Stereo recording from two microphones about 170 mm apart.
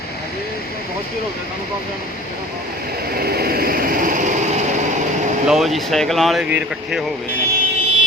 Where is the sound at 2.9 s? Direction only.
65° right (ahead or behind).